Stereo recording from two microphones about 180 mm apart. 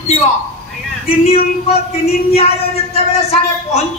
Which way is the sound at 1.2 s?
35° left (ahead or behind).